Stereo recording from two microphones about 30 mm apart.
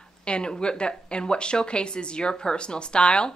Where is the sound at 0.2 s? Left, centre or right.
Left.